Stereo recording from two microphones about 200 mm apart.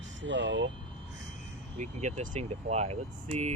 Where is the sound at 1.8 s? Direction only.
35° right (ahead or behind).